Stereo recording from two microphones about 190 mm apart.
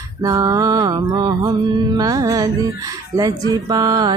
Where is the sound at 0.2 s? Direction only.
20° right (ahead or behind).